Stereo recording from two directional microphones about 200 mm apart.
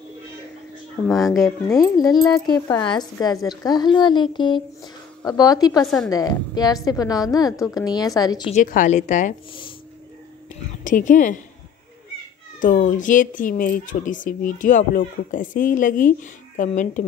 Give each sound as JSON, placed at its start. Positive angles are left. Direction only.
{"t": 1.0, "sound": "speech", "side_deg": 0}
{"t": 1.7, "sound": "a woman's voice", "side_deg": 20}
{"t": 8.5, "sound": "speech", "side_deg": 40}
{"t": 9.5, "sound": "a sound", "side_deg": 25}
{"t": 10.8, "sound": "a woman's voice", "side_deg": 40}
{"t": 12.5, "sound": "speech", "side_deg": 40}